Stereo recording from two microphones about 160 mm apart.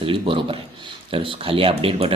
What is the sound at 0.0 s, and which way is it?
Speech, 35° right (ahead or behind).